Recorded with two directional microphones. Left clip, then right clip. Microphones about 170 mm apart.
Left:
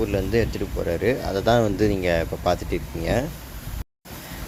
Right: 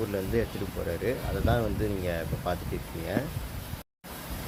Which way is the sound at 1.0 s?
30° left (ahead or behind).